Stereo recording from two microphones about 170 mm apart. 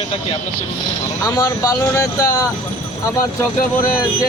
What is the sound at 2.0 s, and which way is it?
Speech, 20° left (ahead or behind).